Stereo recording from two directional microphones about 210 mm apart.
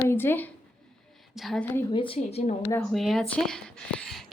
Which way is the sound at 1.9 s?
25° left (ahead or behind).